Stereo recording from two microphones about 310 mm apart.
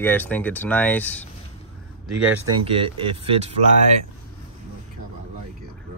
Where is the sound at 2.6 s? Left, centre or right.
Centre.